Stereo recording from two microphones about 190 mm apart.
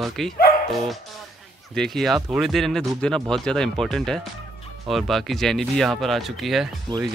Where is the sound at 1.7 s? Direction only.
Centre (ahead or behind).